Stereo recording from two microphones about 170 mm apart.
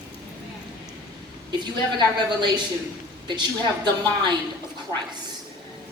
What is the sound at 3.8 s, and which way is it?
Speech, 25° right (ahead or behind).